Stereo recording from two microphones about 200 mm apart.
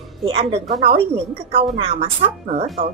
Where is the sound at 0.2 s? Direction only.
25° right (ahead or behind).